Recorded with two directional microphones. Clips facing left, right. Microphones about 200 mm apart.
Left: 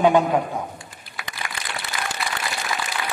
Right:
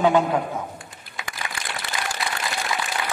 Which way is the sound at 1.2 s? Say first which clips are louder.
Right 1 dB; 20° right (ahead or behind).